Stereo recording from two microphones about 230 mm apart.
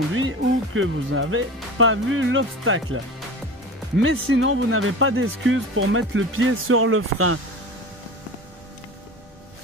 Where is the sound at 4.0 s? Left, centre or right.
Right.